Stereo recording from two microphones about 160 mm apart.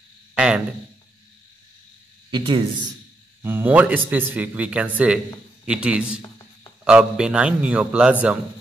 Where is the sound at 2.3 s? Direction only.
30° right (ahead or behind).